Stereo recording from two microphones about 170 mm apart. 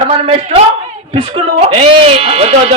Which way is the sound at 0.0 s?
35° right (ahead or behind).